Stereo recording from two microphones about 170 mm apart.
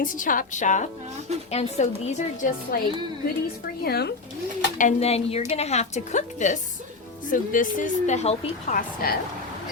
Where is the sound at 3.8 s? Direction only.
70° left (ahead or behind).